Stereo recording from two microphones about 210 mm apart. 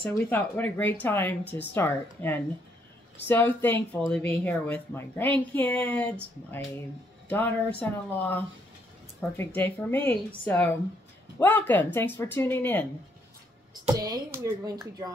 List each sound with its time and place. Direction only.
0.0 s speech: 10° left (ahead or behind)
7.2 s speech: 10° left (ahead or behind)
13.7 s speech: 20° right (ahead or behind)